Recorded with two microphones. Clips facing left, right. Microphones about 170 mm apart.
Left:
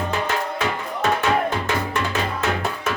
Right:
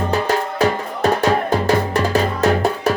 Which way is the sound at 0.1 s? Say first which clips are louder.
Right 5 dB; 40° right (ahead or behind).